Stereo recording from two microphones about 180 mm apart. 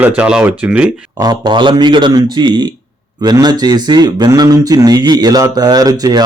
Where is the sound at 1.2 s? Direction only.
20° right (ahead or behind).